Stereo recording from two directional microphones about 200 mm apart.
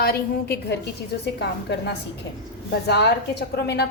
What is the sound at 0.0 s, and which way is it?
A woman's voice, 50° left (ahead or behind).